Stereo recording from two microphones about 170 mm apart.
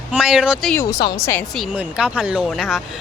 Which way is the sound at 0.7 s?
15° left (ahead or behind).